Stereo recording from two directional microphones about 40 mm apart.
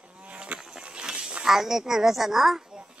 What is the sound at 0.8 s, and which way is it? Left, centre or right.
Pig, right.